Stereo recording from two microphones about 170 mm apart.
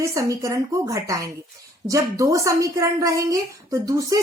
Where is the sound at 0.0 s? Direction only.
20° right (ahead or behind).